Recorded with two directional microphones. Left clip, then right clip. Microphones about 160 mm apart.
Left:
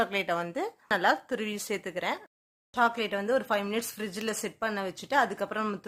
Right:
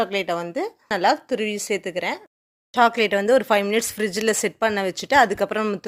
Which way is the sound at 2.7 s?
50° right (ahead or behind).